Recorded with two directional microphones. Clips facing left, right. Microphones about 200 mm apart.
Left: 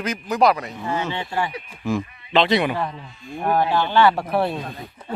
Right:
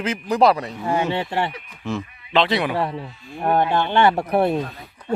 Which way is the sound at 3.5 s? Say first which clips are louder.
Right 1 dB; 25° right (ahead or behind).